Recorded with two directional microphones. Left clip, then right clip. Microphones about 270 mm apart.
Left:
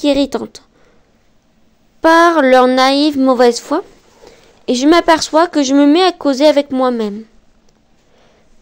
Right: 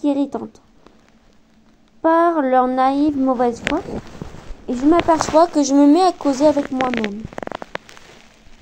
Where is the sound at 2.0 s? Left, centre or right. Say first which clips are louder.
Left 6 dB; left.